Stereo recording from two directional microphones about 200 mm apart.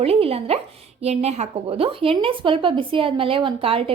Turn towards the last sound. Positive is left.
turn(degrees=-25)  # may be behind; listen again after turning